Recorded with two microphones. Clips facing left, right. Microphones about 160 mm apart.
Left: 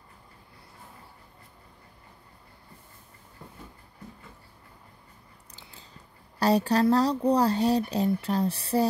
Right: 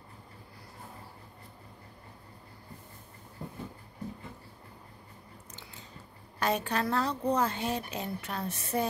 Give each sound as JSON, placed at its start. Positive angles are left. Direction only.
{"t": 6.4, "sound": "speech", "side_deg": 35}